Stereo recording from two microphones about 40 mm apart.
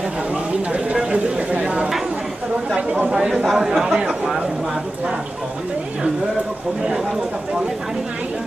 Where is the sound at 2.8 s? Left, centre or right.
Right.